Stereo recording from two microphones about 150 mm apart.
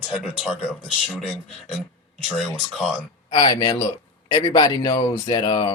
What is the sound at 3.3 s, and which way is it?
Speech, 30° left (ahead or behind).